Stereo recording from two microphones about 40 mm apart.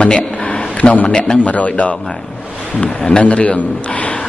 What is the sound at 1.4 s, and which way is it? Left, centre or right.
Speech, left.